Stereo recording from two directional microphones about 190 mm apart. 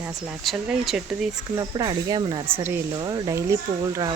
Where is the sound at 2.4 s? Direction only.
10° right (ahead or behind).